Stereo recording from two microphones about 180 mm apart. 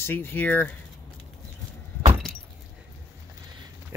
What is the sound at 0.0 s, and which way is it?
Speech, 15° left (ahead or behind).